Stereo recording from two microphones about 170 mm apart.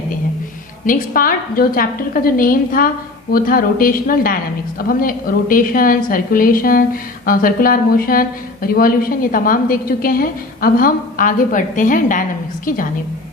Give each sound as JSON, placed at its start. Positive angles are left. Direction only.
{"t": 0.9, "sound": "a woman's voice", "side_deg": 55}